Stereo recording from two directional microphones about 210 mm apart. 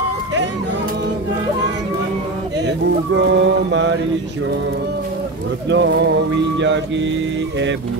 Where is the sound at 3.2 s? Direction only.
60° right (ahead or behind).